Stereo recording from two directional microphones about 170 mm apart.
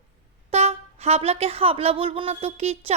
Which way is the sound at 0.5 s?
35° right (ahead or behind).